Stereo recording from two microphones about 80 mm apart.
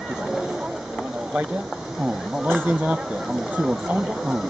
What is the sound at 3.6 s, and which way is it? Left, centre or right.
Speech, centre.